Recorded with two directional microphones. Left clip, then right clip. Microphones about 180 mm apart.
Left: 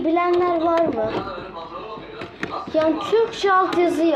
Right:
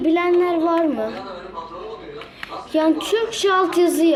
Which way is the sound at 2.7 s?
45° right (ahead or behind).